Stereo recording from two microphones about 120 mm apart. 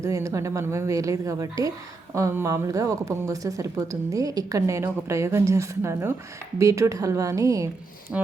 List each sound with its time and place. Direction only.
0.0 s a woman's voice: 25° right (ahead or behind)
8.1 s music: 10° right (ahead or behind)